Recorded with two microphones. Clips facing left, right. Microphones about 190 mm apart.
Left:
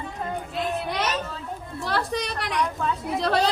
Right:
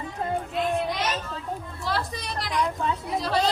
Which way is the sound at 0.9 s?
65° left (ahead or behind).